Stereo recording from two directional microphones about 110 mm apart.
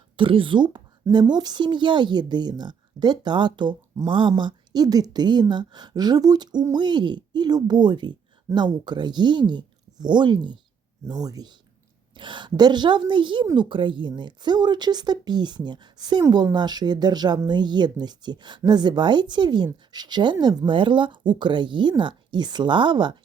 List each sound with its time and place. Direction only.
0.2 s speech: 50° right (ahead or behind)